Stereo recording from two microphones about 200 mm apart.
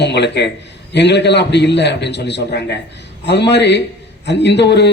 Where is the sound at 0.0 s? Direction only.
60° left (ahead or behind).